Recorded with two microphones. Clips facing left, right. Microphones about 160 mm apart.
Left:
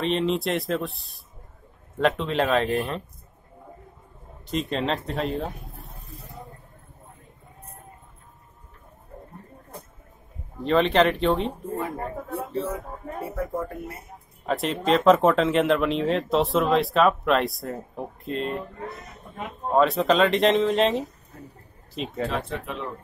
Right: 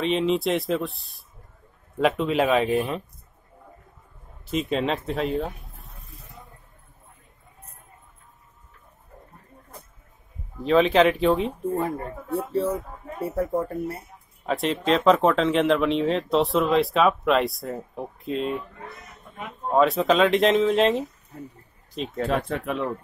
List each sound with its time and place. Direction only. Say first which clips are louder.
0.0 s speech: right 2 dB; centre (ahead or behind)
4.5 s speech: right 1 dB; 5° right (ahead or behind)
5.9 s snake: left 5 dB; 35° left (ahead or behind)
10.6 s speech: right 2 dB; centre (ahead or behind)
13.3 s speech: right 5 dB; 40° right (ahead or behind)
14.4 s speech: right 1 dB; centre (ahead or behind)
19.7 s speech: right 1 dB; centre (ahead or behind)
22.5 s speech: right 5 dB; 55° right (ahead or behind)